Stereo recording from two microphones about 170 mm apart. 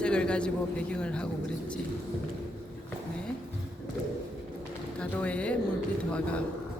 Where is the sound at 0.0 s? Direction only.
5° left (ahead or behind).